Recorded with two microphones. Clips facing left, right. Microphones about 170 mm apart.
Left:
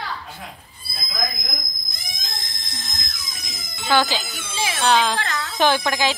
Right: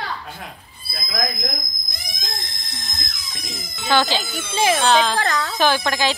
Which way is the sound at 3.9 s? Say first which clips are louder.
Even; 10° left (ahead or behind).